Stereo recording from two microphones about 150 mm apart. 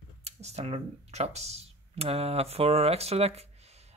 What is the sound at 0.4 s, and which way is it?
Speech, 45° right (ahead or behind).